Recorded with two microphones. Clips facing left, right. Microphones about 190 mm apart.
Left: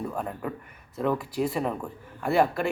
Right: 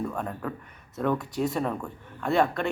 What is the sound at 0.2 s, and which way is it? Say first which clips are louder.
A man's voice: even; 5° left (ahead or behind).